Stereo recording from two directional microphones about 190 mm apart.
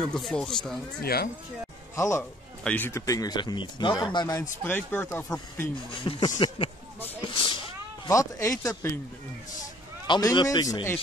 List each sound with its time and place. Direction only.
0.0 s speech: 5° left (ahead or behind)
1.0 s speech: 55° left (ahead or behind)
2.0 s speech: 15° left (ahead or behind)
5.9 s speech: 25° left (ahead or behind)
8.1 s speech: 15° left (ahead or behind)
10.0 s speech: 25° left (ahead or behind)